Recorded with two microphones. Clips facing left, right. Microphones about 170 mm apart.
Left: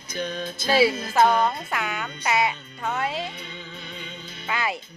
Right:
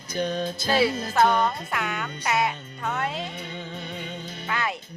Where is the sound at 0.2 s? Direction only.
45° right (ahead or behind).